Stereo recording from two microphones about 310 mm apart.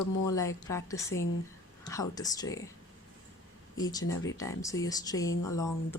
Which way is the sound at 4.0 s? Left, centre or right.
Left.